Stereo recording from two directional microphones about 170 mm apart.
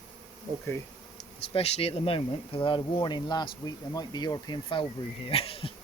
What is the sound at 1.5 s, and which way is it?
Speech, 35° left (ahead or behind).